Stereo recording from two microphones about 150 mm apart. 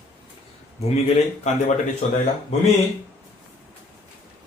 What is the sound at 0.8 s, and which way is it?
Speech, 45° left (ahead or behind).